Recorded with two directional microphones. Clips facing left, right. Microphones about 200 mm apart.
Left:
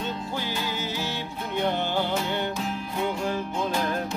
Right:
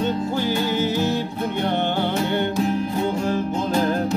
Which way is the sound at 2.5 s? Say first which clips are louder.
Right 9 dB; 40° right (ahead or behind).